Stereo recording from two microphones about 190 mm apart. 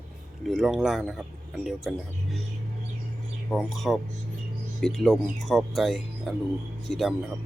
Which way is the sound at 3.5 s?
Centre (ahead or behind).